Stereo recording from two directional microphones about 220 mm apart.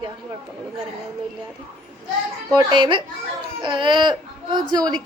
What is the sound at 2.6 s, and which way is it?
A woman's voice, 20° right (ahead or behind).